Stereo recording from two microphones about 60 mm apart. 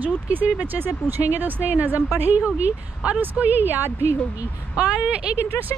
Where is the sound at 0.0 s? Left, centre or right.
Right.